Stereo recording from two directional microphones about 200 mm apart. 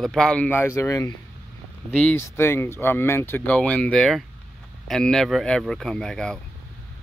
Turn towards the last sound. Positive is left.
turn(degrees=5)  # may be behind; listen again after turning